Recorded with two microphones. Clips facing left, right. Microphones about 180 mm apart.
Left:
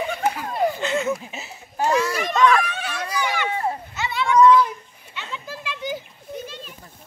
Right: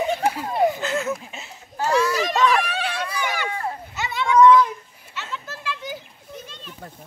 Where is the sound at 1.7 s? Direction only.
25° left (ahead or behind).